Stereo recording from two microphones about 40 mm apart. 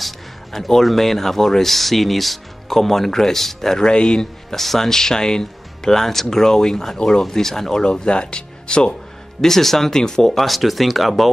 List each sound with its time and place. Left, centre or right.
0.0 s speech: centre
3.8 s speech: left
4.6 s speech: centre
7.8 s speech: left
9.4 s speech: centre